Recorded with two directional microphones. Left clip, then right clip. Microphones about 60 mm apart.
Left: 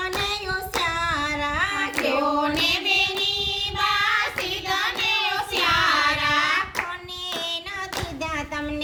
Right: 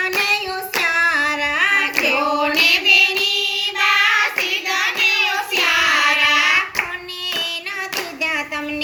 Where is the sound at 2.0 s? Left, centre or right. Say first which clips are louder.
Right 5 dB; right.